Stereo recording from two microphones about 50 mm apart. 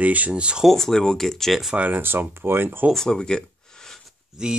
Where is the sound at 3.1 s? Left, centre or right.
Centre.